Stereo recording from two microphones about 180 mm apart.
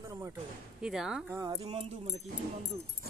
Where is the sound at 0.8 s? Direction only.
5° right (ahead or behind).